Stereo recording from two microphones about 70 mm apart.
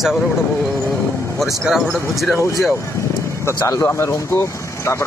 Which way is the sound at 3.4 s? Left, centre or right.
Left.